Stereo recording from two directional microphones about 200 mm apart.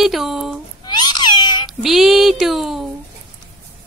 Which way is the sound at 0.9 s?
20° left (ahead or behind).